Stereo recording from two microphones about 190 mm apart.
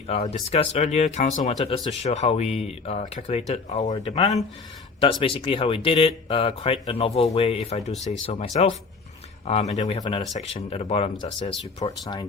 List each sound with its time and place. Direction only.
0.1 s speech: 35° left (ahead or behind)